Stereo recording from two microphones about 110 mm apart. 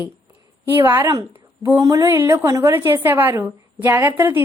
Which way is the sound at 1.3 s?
20° right (ahead or behind).